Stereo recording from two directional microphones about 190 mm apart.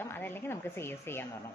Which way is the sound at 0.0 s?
10° left (ahead or behind).